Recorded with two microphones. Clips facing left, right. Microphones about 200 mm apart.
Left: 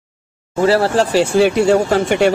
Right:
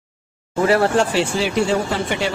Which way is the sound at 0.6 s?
30° left (ahead or behind).